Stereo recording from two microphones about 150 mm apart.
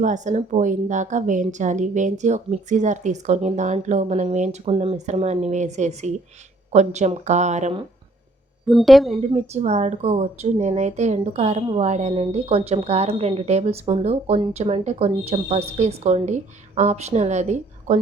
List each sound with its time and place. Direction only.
0.0 s speech: 55° right (ahead or behind)
8.6 s a woman's voice: centre (ahead or behind)
9.3 s speech: 45° right (ahead or behind)